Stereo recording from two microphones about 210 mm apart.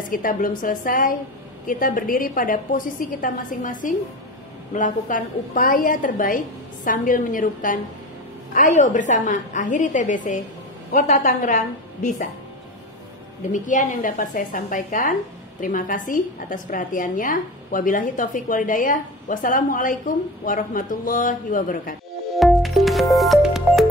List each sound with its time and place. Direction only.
0.1 s a woman's voice: 40° left (ahead or behind)
13.5 s a woman's voice: 40° left (ahead or behind)
22.3 s music: centre (ahead or behind)